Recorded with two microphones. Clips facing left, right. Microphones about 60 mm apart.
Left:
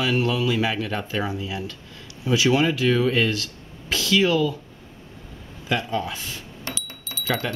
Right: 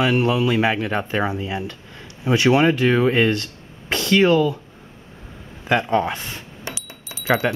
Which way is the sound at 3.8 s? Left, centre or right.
Right.